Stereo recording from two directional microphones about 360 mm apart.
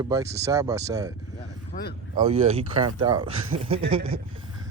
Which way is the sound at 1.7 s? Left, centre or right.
Left.